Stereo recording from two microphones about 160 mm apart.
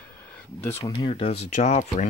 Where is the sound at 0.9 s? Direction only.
35° left (ahead or behind).